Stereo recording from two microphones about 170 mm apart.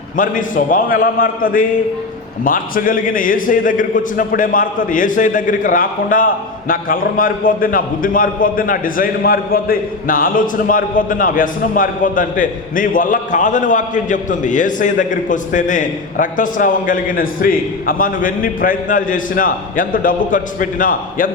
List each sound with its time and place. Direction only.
0.2 s a man's voice: 50° left (ahead or behind)